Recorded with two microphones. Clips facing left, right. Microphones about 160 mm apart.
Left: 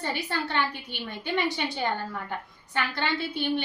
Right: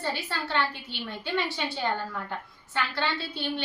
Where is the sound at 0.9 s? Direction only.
15° left (ahead or behind).